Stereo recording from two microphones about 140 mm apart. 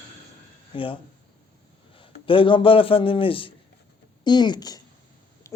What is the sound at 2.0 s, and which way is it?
A man's voice, 40° left (ahead or behind).